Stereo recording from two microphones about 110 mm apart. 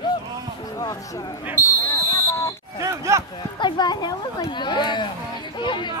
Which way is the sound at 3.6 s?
45° left (ahead or behind).